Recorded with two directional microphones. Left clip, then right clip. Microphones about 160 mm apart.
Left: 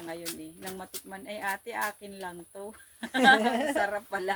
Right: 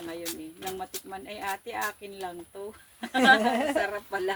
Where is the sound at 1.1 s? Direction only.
25° left (ahead or behind).